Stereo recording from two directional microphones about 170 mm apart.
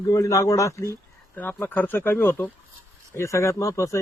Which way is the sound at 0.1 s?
20° left (ahead or behind).